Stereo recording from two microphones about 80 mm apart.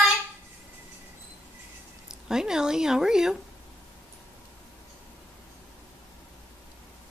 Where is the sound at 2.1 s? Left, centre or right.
Centre.